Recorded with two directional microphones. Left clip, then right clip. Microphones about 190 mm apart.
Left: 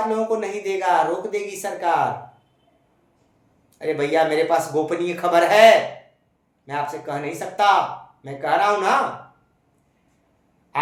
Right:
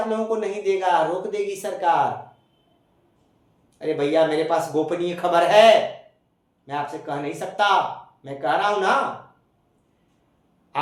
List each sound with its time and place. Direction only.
0.1 s speech: 20° left (ahead or behind)
3.8 s speech: 20° left (ahead or behind)